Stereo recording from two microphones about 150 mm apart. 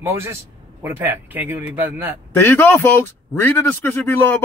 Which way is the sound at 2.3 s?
15° left (ahead or behind).